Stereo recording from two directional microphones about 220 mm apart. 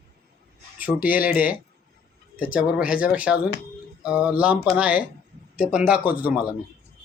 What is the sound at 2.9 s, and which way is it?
Speech, 5° right (ahead or behind).